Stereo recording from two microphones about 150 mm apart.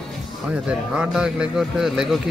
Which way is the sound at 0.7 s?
5° right (ahead or behind).